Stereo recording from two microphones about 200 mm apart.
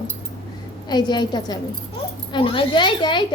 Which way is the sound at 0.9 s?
20° left (ahead or behind).